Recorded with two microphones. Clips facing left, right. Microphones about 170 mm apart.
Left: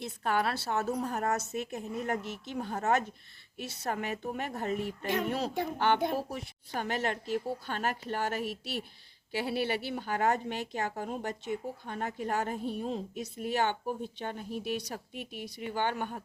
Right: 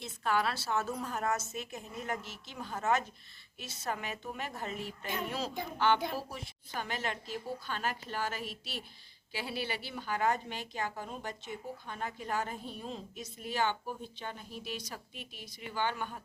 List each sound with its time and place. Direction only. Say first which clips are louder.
0.0 s speech: left 2 dB; 55° left (ahead or behind)
0.8 s speech: left 4 dB; 35° left (ahead or behind)
1.4 s speech: left 6 dB; 60° left (ahead or behind)
5.8 s speech: left 1 dB; 55° left (ahead or behind)
10.8 s speech: left 5 dB; 45° left (ahead or behind)